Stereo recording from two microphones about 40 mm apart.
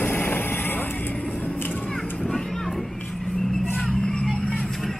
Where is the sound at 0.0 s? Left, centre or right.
Left.